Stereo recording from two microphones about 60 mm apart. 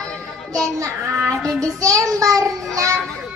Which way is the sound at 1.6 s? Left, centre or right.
Right.